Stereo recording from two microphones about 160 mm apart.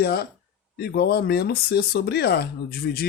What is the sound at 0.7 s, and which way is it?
Speech, 80° left.